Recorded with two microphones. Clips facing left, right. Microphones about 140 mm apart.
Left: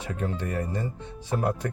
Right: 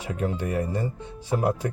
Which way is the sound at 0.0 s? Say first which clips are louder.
Right 3 dB; 10° right (ahead or behind).